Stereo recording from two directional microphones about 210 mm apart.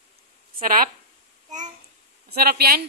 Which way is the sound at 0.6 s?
40° right (ahead or behind).